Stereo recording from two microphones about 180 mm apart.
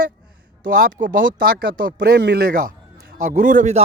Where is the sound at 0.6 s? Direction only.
50° right (ahead or behind).